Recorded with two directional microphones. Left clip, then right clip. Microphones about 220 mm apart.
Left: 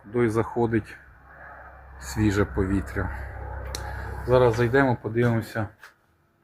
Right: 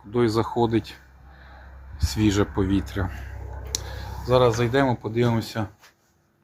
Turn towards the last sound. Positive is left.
turn(degrees=-5)  # may be behind; listen again after turning